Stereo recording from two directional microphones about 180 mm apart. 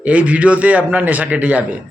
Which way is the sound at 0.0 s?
10° right (ahead or behind).